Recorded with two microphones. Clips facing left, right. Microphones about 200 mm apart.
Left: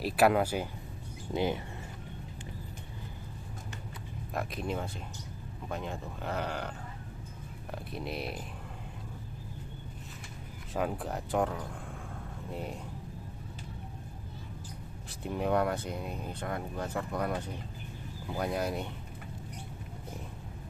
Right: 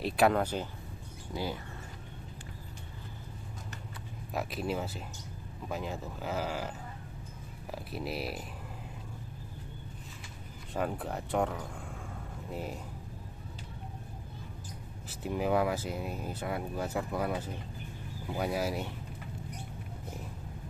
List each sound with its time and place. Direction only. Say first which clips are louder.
0.0 s speech: left 1 dB; 5° left (ahead or behind)
1.3 s speech: left 5 dB; 20° left (ahead or behind)
4.3 s speech: right 1 dB; 5° right (ahead or behind)
7.9 s speech: right 1 dB; 5° right (ahead or behind)
10.7 s speech: left 1 dB; centre (ahead or behind)
15.2 s speech: even; 5° right (ahead or behind)